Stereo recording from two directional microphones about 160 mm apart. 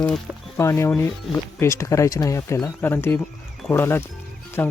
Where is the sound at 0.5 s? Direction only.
15° left (ahead or behind).